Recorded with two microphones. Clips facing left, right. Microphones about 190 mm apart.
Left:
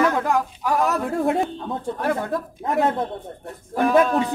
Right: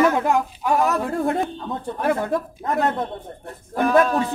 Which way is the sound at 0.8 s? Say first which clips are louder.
Left 1 dB; centre (ahead or behind).